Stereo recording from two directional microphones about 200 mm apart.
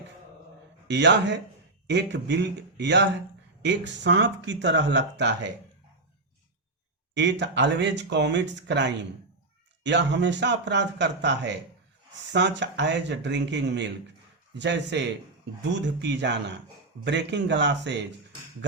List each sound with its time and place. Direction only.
0.9 s speech: 60° right (ahead or behind)
7.1 s speech: 60° right (ahead or behind)